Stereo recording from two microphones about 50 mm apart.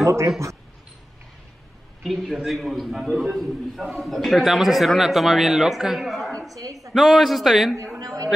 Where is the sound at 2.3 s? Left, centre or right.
Centre.